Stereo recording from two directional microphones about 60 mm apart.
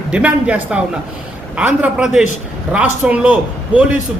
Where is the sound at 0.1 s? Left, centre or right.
Right.